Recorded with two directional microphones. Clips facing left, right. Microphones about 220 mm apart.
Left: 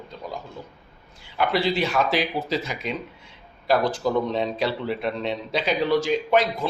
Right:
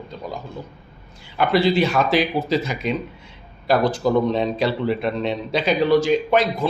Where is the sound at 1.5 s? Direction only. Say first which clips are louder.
Right 6 dB; 45° right (ahead or behind).